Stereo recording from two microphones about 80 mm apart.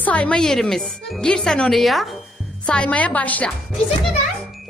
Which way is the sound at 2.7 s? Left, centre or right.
Centre.